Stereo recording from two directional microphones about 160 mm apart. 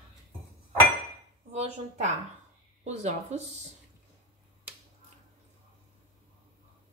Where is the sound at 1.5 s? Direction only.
45° right (ahead or behind).